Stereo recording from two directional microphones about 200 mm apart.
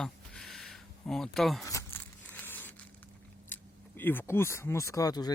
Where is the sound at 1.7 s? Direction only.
15° left (ahead or behind).